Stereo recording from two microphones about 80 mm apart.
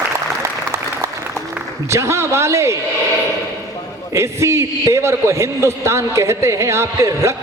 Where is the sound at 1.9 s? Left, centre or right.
Right.